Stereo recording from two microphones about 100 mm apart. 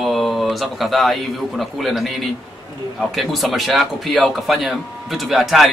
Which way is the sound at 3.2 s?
Centre (ahead or behind).